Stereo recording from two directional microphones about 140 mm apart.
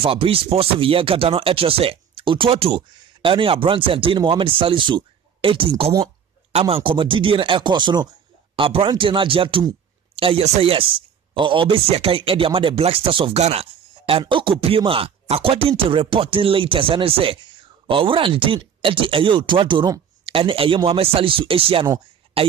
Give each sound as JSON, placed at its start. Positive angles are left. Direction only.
{"t": 0.0, "sound": "speech", "side_deg": -40}